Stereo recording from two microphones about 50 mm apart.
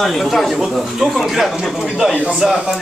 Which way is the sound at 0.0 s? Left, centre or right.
Centre.